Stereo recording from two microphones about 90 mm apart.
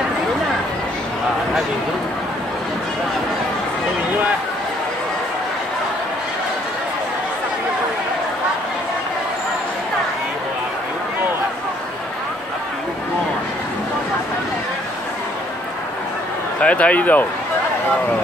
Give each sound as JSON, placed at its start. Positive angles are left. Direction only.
{"t": 16.6, "sound": "speech", "side_deg": 15}